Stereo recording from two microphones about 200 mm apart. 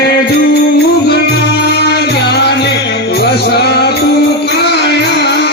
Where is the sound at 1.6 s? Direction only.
55° left (ahead or behind).